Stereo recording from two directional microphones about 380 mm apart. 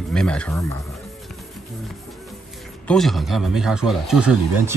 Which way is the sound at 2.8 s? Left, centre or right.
Centre.